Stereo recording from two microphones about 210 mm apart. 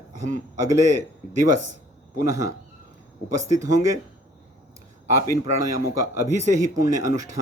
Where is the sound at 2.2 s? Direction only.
15° right (ahead or behind).